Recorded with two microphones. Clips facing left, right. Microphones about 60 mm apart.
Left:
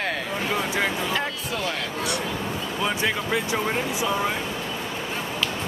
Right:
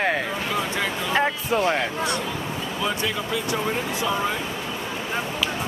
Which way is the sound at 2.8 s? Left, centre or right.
Left.